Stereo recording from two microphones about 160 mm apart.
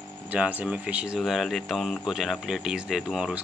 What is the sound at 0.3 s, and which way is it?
Speech, 10° right (ahead or behind).